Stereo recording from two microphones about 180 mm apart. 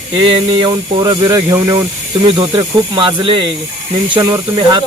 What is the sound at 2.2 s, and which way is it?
Speech, 30° right (ahead or behind).